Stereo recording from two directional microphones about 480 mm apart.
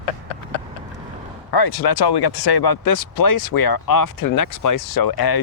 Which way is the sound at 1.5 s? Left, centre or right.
Left.